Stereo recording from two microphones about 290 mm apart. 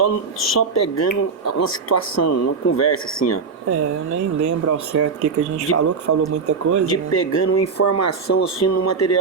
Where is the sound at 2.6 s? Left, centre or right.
Left.